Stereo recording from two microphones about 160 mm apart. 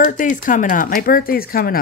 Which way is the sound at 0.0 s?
55° left (ahead or behind).